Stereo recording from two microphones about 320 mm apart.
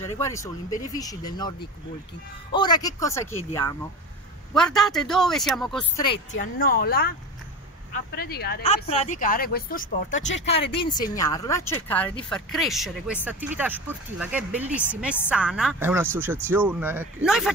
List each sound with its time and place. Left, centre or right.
0.0 s speech: centre
6.1 s speech: left
8.1 s speech: left
10.4 s speech: centre